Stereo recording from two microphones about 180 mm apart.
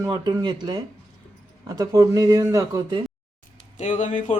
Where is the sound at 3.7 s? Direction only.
40° left (ahead or behind).